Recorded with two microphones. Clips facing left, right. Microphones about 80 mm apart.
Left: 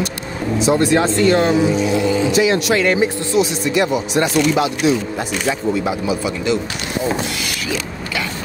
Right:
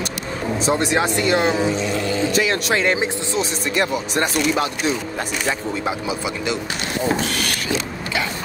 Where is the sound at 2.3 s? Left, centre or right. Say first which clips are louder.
Left 4 dB; right.